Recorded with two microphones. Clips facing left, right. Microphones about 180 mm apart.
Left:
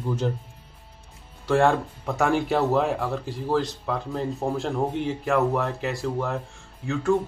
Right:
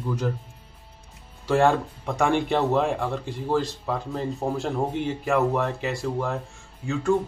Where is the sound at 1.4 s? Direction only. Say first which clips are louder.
Even; centre (ahead or behind).